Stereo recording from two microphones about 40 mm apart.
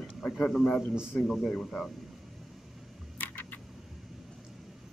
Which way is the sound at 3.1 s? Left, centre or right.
Left.